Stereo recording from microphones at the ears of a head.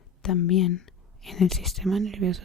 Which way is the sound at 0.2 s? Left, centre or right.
Left.